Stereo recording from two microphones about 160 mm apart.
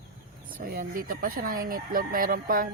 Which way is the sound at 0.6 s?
65° right (ahead or behind).